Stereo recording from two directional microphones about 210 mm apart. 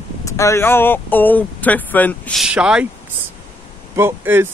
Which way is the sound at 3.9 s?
10° right (ahead or behind).